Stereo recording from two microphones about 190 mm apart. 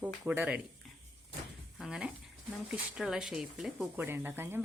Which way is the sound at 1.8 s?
5° right (ahead or behind).